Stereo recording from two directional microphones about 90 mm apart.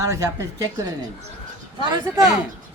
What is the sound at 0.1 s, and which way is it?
Speech, 35° right (ahead or behind).